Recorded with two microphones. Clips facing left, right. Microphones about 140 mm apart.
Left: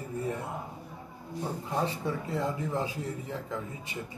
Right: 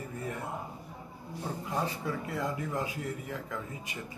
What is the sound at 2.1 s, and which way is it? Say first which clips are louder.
Speech: left 2 dB; 25° left (ahead or behind).